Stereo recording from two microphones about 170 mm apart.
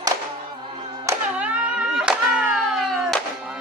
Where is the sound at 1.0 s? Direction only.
10° right (ahead or behind).